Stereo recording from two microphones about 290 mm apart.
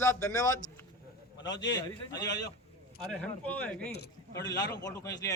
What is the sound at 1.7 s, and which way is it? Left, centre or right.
A man's voice, centre.